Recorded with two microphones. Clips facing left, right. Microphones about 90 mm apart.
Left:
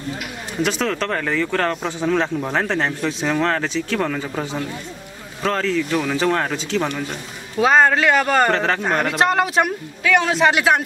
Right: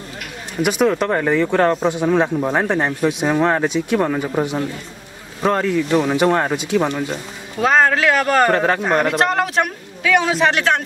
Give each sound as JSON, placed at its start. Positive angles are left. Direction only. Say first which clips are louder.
{"t": 0.6, "sound": "speech", "louder": "right 5 dB", "side_deg": -15}
{"t": 7.5, "sound": "a man's voice", "louder": "even", "side_deg": 0}